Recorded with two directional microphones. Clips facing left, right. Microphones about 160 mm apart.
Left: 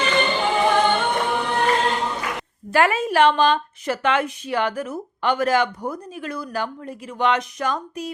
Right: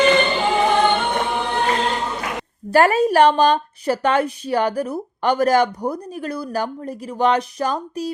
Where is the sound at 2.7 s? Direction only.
40° right (ahead or behind).